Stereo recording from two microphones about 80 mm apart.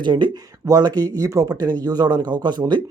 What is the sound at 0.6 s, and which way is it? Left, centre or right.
Speech, right.